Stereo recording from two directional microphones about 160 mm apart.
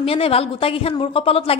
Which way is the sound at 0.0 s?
35° left (ahead or behind).